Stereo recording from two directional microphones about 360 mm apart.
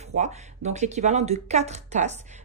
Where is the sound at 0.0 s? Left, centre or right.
Centre.